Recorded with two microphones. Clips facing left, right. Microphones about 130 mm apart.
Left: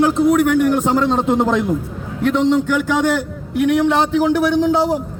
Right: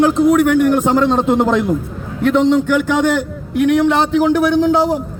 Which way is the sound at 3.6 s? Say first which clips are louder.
Right 2 dB; 60° right (ahead or behind).